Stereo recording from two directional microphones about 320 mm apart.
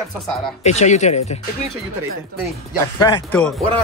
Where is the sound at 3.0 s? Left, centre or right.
Centre.